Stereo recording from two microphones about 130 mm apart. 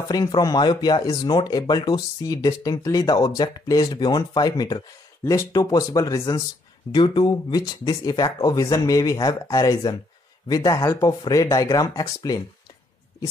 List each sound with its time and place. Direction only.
0.1 s speech: 30° left (ahead or behind)
6.9 s speech: 35° left (ahead or behind)